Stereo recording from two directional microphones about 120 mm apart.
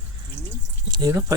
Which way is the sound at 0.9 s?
30° right (ahead or behind).